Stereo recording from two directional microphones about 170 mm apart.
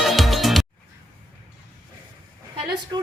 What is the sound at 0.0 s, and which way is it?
Music, centre (ahead or behind).